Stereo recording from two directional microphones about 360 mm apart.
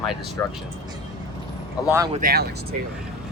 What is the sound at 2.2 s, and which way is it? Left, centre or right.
Speech, right.